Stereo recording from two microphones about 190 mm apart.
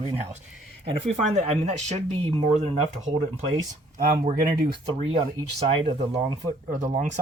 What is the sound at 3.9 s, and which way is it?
Speech, 50° right (ahead or behind).